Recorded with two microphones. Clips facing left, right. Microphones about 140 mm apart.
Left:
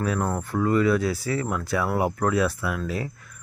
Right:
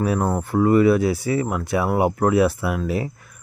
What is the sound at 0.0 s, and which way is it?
Speech, 20° right (ahead or behind).